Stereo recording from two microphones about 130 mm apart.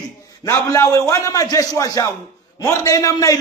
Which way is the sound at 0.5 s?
25° left (ahead or behind).